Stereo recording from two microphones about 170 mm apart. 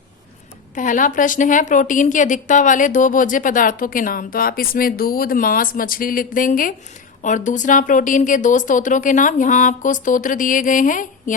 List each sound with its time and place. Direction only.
0.8 s a woman's voice: 50° left (ahead or behind)